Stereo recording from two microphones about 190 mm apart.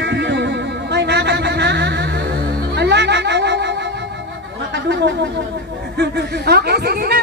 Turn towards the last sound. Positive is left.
turn(degrees=-55)  # may be behind; listen again after turning